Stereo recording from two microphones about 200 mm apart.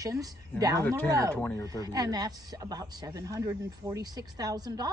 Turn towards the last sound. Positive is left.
turn(degrees=-20)  # may be behind; listen again after turning